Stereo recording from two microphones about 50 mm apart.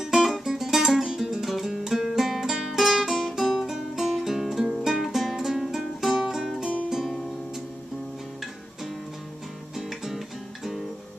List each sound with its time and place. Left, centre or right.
0.0 s music: centre
9.8 s music: centre